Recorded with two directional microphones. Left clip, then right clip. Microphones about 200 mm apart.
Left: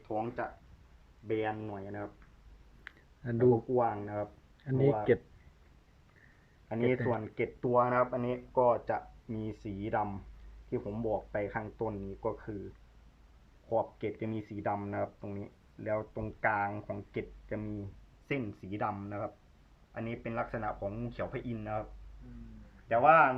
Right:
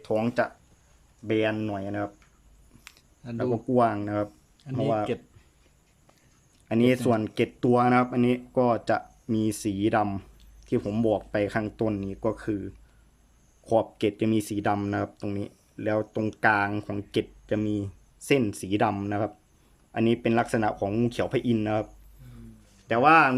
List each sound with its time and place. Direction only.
0.0 s speech: 50° right (ahead or behind); by 2.0 s 65° right (ahead or behind)
3.3 s speech: 85° right
4.7 s speech: 5° right (ahead or behind)
6.7 s speech: 85° right
13.7 s speech: 75° right (ahead or behind)
18.3 s speech: 50° right (ahead or behind)
22.9 s speech: 65° right (ahead or behind)